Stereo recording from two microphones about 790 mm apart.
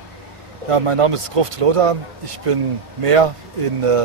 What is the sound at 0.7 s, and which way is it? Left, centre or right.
Speech, right.